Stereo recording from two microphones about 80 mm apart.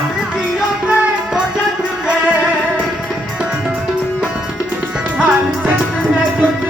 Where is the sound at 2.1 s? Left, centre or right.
Centre.